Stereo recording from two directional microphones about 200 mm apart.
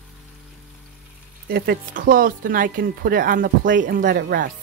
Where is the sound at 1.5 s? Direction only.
50° right (ahead or behind).